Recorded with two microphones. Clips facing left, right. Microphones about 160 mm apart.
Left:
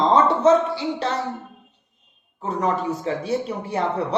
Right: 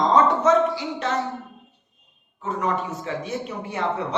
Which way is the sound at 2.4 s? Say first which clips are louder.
Left 2 dB; 35° left (ahead or behind).